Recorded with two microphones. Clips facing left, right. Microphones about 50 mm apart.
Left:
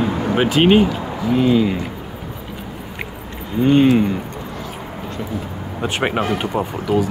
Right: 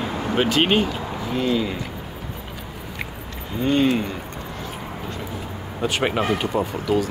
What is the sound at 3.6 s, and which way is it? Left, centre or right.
Speech, centre.